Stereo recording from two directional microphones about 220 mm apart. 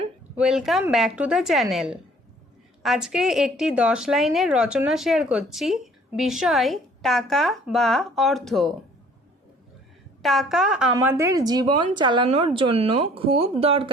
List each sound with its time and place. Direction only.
0.3 s a woman's voice: centre (ahead or behind)
10.2 s a woman's voice: centre (ahead or behind); by 13.9 s 25° right (ahead or behind)